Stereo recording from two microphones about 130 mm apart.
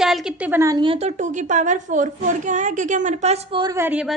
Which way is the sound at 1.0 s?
65° right (ahead or behind).